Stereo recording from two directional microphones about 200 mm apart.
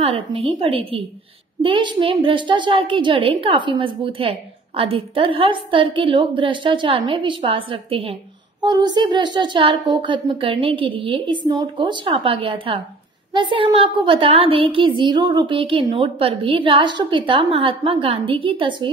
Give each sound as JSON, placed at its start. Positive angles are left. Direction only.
{"t": 0.0, "sound": "a woman's voice", "side_deg": -25}